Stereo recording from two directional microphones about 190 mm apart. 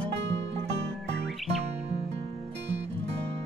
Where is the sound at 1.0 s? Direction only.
65° right (ahead or behind).